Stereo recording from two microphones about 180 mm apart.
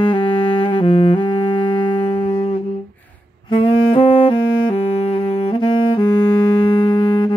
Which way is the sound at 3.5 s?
30° left (ahead or behind).